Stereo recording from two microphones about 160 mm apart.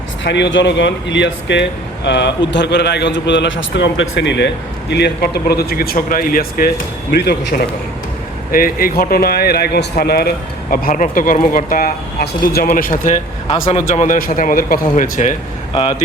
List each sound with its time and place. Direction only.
0.3 s a man's voice: 90° left; by 6.7 s 65° left (ahead or behind)
7.1 s a man's voice: 90° left
8.5 s speech: 65° left (ahead or behind)
12.7 s speech: 55° left (ahead or behind)
15.7 s speech: 40° left (ahead or behind)